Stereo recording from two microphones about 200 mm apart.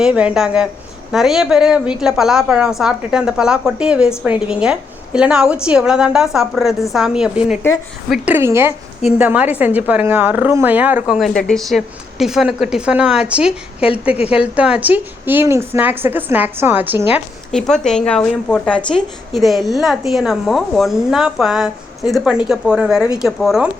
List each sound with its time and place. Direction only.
0.0 s a woman's voice: 5° right (ahead or behind)
17.5 s a woman's voice: centre (ahead or behind)